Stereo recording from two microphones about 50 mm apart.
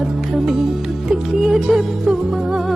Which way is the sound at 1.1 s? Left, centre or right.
Centre.